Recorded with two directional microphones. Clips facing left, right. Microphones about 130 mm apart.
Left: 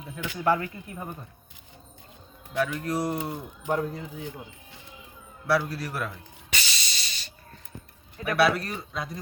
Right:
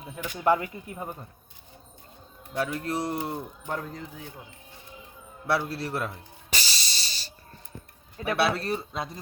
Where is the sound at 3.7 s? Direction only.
5° left (ahead or behind).